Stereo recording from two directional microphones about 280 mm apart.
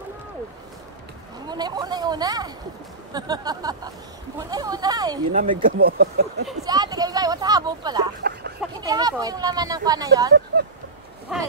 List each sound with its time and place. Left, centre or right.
1.5 s chatter: centre
3.1 s speech: centre
5.3 s speech: right
6.6 s speech: centre
8.2 s a sound: right
8.5 s speech: centre
11.3 s speech: centre